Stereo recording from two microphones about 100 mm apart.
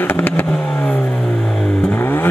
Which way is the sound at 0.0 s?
20° left (ahead or behind).